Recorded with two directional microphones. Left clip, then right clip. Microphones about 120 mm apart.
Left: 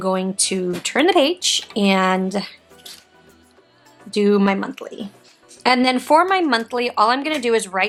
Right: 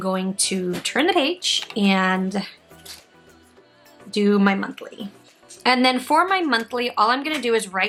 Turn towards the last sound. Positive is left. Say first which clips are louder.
# left 2 dB
turn(degrees=20)  # may be behind; listen again after turning